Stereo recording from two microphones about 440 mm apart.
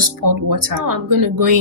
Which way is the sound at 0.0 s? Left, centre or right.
Right.